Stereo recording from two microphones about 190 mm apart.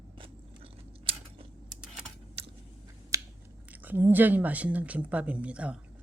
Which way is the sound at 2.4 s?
30° right (ahead or behind).